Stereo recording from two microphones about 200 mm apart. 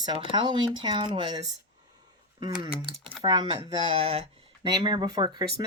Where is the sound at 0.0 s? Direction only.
20° right (ahead or behind).